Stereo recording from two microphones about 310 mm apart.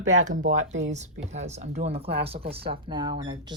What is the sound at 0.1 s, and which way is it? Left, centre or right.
Speech, right.